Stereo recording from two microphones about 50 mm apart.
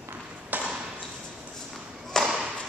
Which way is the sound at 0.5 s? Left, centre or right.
Right.